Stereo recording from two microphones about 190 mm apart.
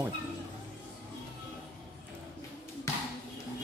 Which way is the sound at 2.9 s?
15° left (ahead or behind).